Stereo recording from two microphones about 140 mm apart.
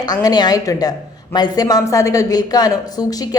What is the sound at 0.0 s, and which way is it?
Speech, 30° left (ahead or behind).